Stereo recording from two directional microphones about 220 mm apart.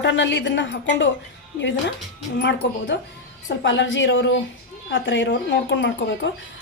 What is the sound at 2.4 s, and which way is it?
A woman's voice, 50° left (ahead or behind).